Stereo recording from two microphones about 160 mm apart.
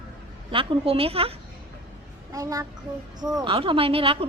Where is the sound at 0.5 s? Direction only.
35° right (ahead or behind).